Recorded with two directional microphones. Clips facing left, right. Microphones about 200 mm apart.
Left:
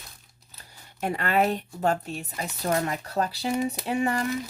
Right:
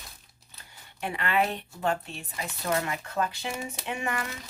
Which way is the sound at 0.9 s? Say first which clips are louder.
Left 3 dB; 40° left (ahead or behind).